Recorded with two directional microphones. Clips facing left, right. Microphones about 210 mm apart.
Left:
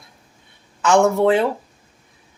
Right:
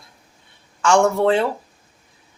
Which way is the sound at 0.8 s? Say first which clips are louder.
Left 1 dB; 20° left (ahead or behind).